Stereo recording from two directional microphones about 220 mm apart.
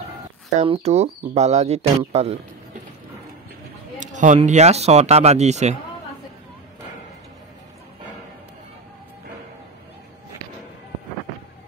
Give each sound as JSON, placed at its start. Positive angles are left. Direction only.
{"t": 0.6, "sound": "speech", "side_deg": -30}
{"t": 4.0, "sound": "speech", "side_deg": -35}